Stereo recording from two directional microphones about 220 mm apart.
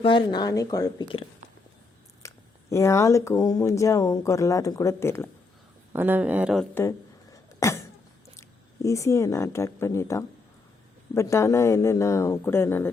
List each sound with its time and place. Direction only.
0.0 s speech: 20° left (ahead or behind)
2.2 s speech: 15° left (ahead or behind)
5.9 s speech: 10° right (ahead or behind)
6.7 s a sound: 15° left (ahead or behind)
8.4 s speech: 15° left (ahead or behind)